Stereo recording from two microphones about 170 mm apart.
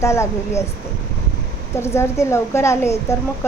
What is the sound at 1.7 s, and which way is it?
A woman's voice, 15° left (ahead or behind).